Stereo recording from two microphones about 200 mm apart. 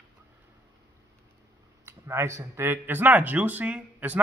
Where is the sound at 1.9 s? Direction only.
15° right (ahead or behind).